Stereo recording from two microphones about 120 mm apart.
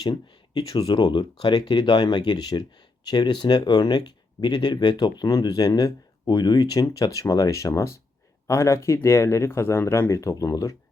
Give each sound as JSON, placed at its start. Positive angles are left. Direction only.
{"t": 0.0, "sound": "speech", "side_deg": 35}